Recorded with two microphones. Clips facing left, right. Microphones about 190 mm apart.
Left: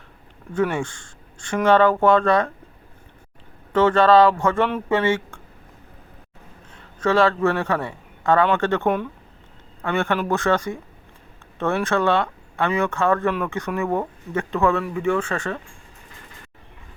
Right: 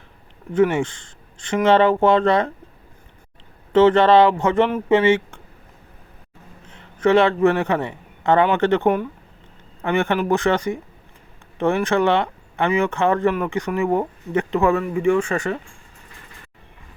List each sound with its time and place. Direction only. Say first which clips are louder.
0.5 s a man's voice: right 5 dB; 20° right (ahead or behind)
3.7 s a man's voice: right 2 dB; 20° right (ahead or behind)
7.0 s a man's voice: right 3 dB; 20° right (ahead or behind)